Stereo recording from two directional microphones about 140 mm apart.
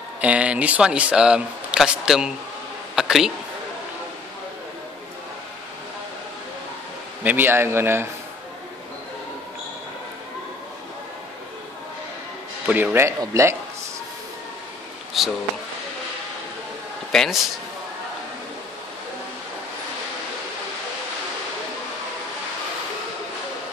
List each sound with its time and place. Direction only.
0.2 s speech: 10° right (ahead or behind)
7.2 s speech: 15° right (ahead or behind)
12.6 s a man's voice: 10° right (ahead or behind)
15.2 s speech: centre (ahead or behind)
17.1 s a man's voice: 5° left (ahead or behind)